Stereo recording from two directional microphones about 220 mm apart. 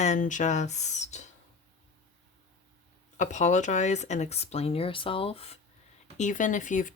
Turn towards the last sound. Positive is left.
turn(degrees=35)  # may be behind; listen again after turning